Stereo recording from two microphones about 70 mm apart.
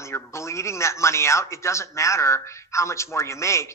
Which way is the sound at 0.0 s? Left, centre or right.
Left.